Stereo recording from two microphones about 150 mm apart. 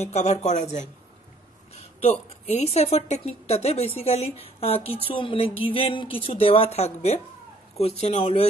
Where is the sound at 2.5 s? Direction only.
45° left (ahead or behind).